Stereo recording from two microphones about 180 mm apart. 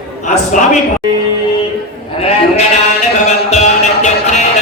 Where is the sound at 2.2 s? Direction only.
35° left (ahead or behind).